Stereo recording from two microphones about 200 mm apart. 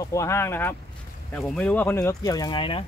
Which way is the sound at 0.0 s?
15° left (ahead or behind).